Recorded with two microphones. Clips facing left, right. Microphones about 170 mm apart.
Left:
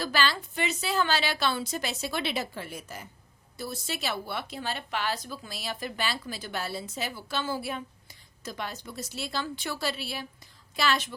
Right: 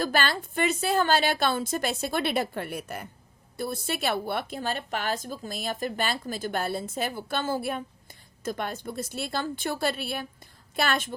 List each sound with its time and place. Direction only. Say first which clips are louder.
0.0 s speech: right 2 dB; 50° right (ahead or behind)